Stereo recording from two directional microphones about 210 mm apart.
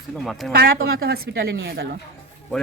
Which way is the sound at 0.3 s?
Centre (ahead or behind).